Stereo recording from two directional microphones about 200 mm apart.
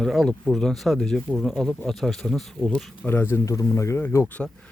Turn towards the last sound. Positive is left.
turn(degrees=10)  # may be behind; listen again after turning